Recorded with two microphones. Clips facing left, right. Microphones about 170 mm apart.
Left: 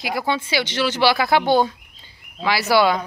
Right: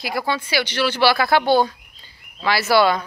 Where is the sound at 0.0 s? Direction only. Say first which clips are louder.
Left 1 dB; 20° left (ahead or behind).